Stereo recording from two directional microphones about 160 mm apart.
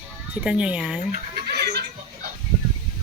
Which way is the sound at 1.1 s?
75° right (ahead or behind).